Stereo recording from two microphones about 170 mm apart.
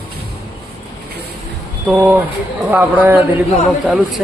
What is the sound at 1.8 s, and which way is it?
A man's voice, 10° right (ahead or behind).